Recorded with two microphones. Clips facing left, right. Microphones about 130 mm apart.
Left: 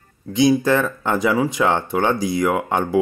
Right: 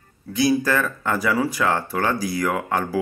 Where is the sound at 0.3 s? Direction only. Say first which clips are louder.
Left 4 dB; 20° left (ahead or behind).